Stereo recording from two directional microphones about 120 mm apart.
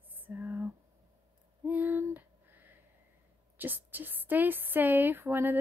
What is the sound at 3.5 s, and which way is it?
Speech, 15° right (ahead or behind).